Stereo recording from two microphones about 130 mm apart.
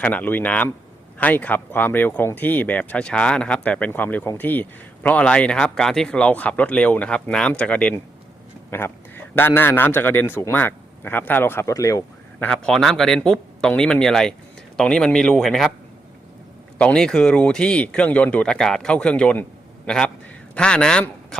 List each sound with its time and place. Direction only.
0.0 s a man's voice: 10° left (ahead or behind)
12.4 s speech: 5° left (ahead or behind)
16.7 s a man's voice: 5° left (ahead or behind)